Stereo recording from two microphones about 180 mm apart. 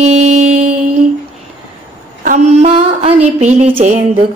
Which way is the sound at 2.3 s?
40° right (ahead or behind).